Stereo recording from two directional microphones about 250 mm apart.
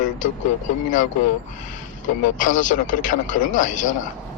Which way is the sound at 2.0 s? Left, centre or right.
Left.